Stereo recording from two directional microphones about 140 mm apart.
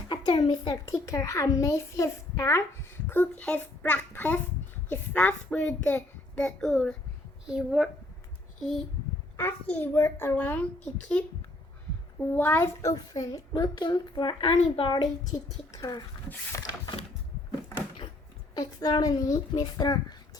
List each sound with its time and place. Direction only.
0.1 s a child's voice: 35° left (ahead or behind); by 7.9 s 5° right (ahead or behind)
9.4 s a woman's voice: 15° left (ahead or behind)
12.3 s a child's voice: 15° left (ahead or behind); by 15.0 s 40° left (ahead or behind)
15.8 s a child's voice: 30° left (ahead or behind)
18.5 s a child's voice: 25° left (ahead or behind)